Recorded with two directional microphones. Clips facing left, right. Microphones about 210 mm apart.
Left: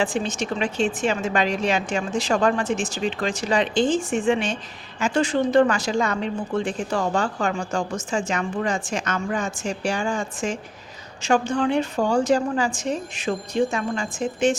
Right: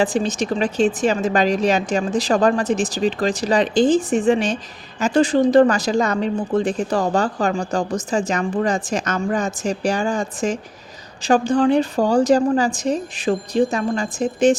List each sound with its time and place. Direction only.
0.0 s a woman's voice: 35° right (ahead or behind)